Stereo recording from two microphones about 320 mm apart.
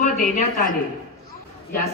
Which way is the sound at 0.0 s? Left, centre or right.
Left.